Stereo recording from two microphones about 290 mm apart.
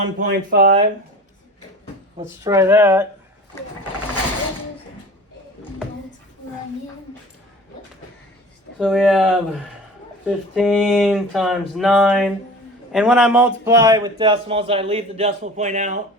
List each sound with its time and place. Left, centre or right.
0.2 s speech: right
2.2 s a man's voice: centre
8.8 s a man's voice: centre; by 16.0 s right